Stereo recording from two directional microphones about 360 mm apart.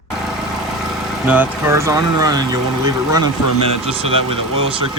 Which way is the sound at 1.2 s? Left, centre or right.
Centre.